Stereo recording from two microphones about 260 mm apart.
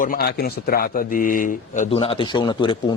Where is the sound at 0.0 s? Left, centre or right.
Left.